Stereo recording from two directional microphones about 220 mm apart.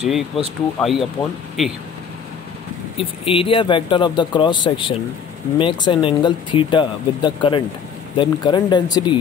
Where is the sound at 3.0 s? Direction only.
25° left (ahead or behind).